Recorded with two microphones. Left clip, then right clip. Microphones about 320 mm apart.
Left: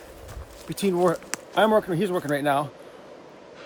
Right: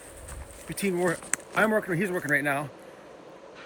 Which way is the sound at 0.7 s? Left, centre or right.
Centre.